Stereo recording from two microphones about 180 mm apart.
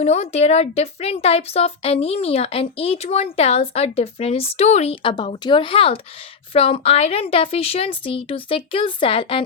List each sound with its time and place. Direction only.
0.0 s a woman's voice: 35° left (ahead or behind)